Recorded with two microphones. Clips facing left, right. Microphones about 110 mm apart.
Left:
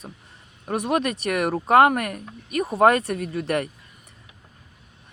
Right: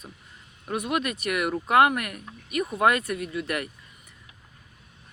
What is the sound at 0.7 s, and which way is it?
Speech, 40° left (ahead or behind).